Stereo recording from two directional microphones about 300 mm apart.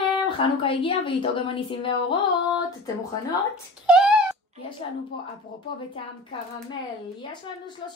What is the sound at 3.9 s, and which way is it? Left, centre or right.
Wail, centre.